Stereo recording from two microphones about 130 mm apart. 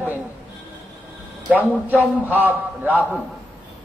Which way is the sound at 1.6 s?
15° right (ahead or behind).